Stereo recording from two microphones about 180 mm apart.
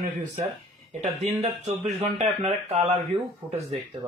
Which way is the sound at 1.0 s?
40° right (ahead or behind).